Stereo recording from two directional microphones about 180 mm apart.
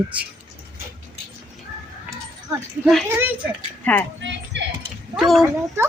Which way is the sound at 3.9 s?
5° left (ahead or behind).